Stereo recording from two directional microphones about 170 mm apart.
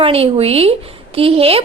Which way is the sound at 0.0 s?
35° right (ahead or behind).